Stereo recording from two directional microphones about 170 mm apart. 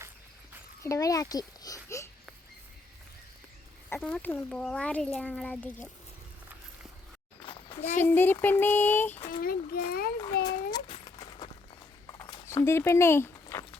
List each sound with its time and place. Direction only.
0.8 s a child's voice: 20° left (ahead or behind)
3.8 s a child's voice: 10° left (ahead or behind)
7.4 s a sound: 30° left (ahead or behind)
8.0 s a child's voice: 10° left (ahead or behind)
9.3 s a child's voice: 60° left (ahead or behind)
10.4 s a sound: 25° left (ahead or behind)
12.3 s speech: 15° left (ahead or behind)